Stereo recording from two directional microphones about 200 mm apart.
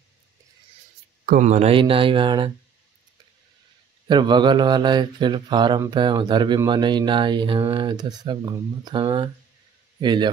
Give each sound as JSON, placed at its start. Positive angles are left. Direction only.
{"t": 1.2, "sound": "speech", "side_deg": -40}
{"t": 4.1, "sound": "a man's voice", "side_deg": -20}